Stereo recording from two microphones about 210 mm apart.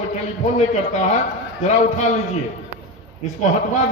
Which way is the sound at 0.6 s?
35° left (ahead or behind).